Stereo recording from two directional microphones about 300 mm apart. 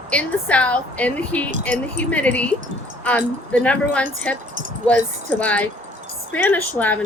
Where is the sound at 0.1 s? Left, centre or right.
Centre.